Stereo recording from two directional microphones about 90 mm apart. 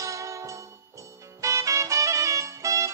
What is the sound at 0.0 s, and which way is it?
Music, 35° right (ahead or behind).